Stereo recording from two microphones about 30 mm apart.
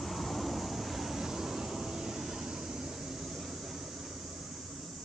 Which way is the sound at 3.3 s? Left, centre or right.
Centre.